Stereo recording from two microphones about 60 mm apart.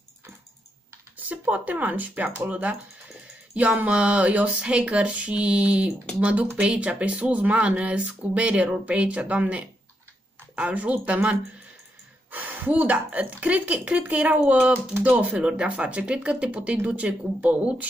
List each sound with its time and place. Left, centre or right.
1.1 s speech: right